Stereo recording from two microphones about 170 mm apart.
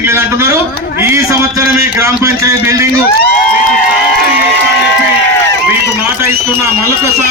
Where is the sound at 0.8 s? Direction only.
65° left (ahead or behind).